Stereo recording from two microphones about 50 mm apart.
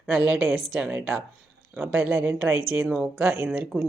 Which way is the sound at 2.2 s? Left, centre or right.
Right.